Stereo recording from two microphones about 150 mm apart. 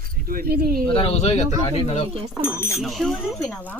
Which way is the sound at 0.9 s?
40° left (ahead or behind).